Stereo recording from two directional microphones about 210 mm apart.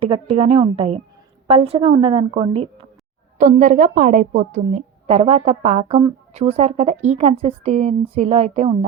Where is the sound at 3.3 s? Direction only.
40° right (ahead or behind).